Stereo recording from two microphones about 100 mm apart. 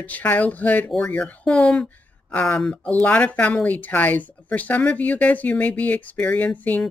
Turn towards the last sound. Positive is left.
turn(degrees=15)  # may be behind; listen again after turning